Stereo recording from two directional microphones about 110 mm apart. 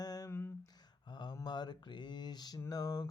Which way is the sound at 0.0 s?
35° left (ahead or behind).